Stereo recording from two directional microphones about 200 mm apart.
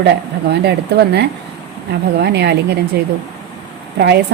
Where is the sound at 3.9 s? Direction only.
55° right (ahead or behind).